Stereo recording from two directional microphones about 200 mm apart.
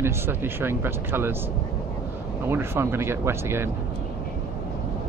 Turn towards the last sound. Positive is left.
turn(degrees=-10)  # may be behind; listen again after turning